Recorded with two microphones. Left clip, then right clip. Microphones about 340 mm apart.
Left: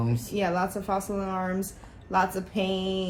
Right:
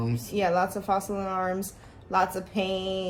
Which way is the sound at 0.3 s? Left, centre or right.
Centre.